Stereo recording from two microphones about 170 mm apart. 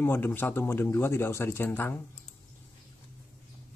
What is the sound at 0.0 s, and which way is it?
Speech, 10° left (ahead or behind).